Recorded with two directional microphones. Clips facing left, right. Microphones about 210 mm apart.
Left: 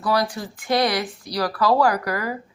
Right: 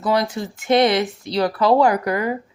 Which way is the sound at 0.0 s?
20° right (ahead or behind).